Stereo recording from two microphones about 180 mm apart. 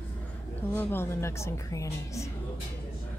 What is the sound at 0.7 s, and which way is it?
A woman's voice, 10° left (ahead or behind).